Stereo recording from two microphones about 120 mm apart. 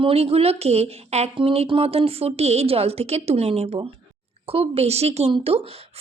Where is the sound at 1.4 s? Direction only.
45° right (ahead or behind).